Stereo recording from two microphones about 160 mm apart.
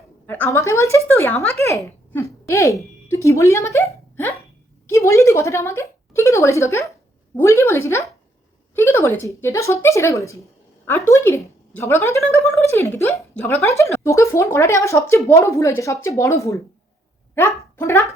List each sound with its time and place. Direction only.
0.3 s a woman's voice: 10° left (ahead or behind)